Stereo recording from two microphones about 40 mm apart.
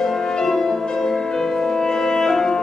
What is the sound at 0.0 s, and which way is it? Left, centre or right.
Music, centre.